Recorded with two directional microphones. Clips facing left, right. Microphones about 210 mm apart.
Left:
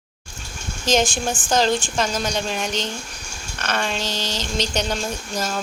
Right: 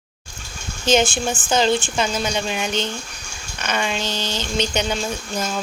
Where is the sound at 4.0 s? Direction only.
30° left (ahead or behind).